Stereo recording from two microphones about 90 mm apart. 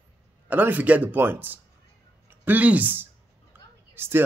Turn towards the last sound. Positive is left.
turn(degrees=-25)  # may be behind; listen again after turning